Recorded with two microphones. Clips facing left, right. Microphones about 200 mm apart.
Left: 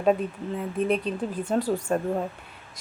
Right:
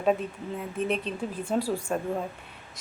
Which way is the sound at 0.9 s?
40° left (ahead or behind).